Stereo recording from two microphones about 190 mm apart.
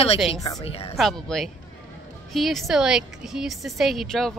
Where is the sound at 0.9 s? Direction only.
Centre (ahead or behind).